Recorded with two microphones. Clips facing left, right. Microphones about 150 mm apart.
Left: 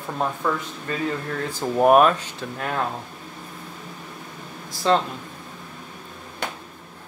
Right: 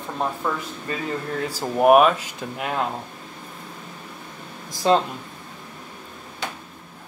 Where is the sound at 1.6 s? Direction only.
10° right (ahead or behind).